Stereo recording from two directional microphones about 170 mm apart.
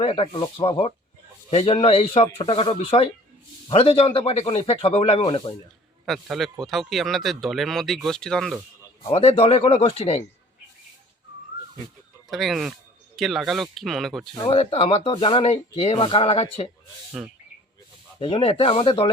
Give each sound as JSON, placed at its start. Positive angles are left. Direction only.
{"t": 0.0, "sound": "speech", "side_deg": 35}
{"t": 6.1, "sound": "speech", "side_deg": 0}
{"t": 9.0, "sound": "speech", "side_deg": 35}
{"t": 12.3, "sound": "speech", "side_deg": 0}
{"t": 14.4, "sound": "speech", "side_deg": 35}
{"t": 17.2, "sound": "speech", "side_deg": 0}
{"t": 18.2, "sound": "speech", "side_deg": 30}